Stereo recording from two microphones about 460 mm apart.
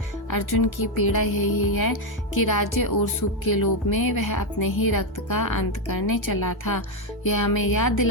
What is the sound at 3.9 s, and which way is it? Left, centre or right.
Speech, left.